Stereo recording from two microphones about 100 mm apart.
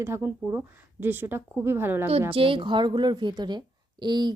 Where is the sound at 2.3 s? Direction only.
65° right (ahead or behind).